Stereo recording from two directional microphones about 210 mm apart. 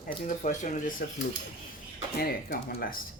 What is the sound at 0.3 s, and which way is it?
Speech, 35° left (ahead or behind).